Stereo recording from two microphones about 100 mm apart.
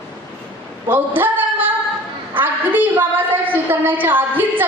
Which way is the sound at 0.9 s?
20° right (ahead or behind).